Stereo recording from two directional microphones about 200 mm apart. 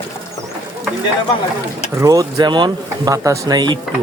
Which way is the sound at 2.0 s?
15° right (ahead or behind).